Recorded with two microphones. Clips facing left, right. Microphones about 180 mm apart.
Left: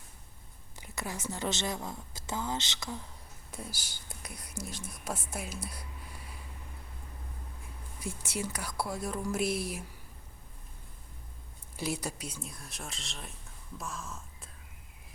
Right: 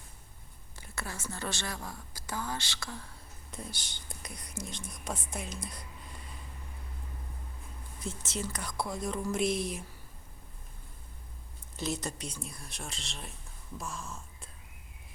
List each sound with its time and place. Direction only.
0.8 s a woman's voice: 15° left (ahead or behind)
3.5 s speech: 5° left (ahead or behind)
8.0 s speech: 10° left (ahead or behind)
11.8 s speech: 10° left (ahead or behind)